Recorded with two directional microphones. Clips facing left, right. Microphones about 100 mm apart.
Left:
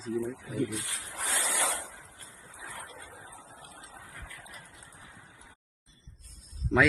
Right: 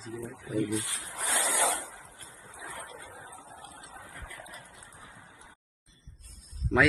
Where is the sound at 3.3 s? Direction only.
30° right (ahead or behind).